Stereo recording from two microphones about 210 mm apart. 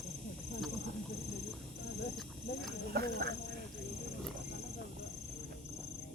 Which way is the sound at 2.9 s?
50° right (ahead or behind).